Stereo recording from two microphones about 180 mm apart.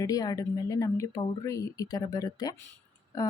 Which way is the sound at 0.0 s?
20° left (ahead or behind).